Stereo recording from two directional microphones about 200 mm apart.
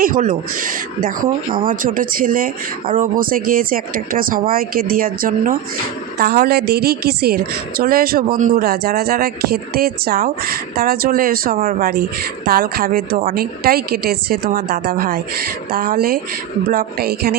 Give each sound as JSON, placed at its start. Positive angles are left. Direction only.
{"t": 0.0, "sound": "speech", "side_deg": -40}